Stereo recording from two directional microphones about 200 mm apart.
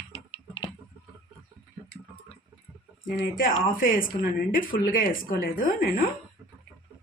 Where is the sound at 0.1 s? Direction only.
25° left (ahead or behind).